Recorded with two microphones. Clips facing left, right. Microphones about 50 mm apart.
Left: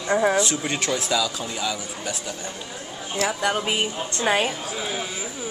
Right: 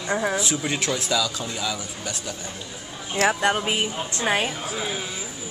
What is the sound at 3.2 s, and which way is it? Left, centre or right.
Speech, right.